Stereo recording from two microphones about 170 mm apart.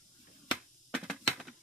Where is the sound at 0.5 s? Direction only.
5° right (ahead or behind).